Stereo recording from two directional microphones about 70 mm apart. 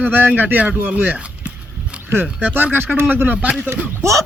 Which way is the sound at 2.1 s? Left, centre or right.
Right.